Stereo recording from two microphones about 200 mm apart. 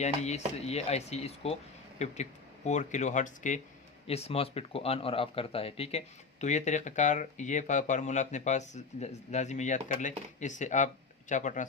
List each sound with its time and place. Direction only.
0.0 s speech: 35° left (ahead or behind)